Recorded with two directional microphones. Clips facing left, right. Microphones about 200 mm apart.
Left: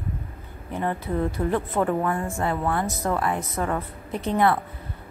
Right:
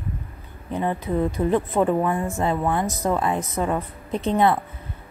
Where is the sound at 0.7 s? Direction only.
15° right (ahead or behind).